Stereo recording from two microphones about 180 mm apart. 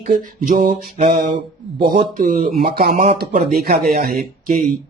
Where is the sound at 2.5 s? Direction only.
60° right (ahead or behind).